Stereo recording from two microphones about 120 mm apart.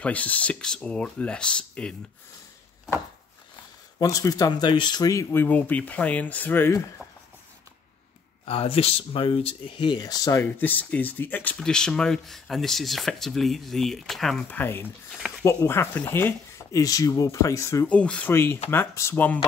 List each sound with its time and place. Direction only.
0.0 s speech: 10° left (ahead or behind)
4.0 s speech: 30° left (ahead or behind)
5.3 s speech: 15° left (ahead or behind)
7.0 s a sound: centre (ahead or behind)
8.5 s speech: 55° left (ahead or behind); by 10.4 s 30° left (ahead or behind)
10.4 s speech: 15° left (ahead or behind)
14.5 s speech: 15° left (ahead or behind)
17.8 s speech: 10° left (ahead or behind)